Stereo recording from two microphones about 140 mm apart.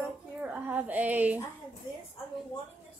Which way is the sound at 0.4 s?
10° right (ahead or behind).